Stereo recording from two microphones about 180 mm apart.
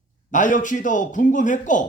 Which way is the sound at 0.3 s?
45° left (ahead or behind).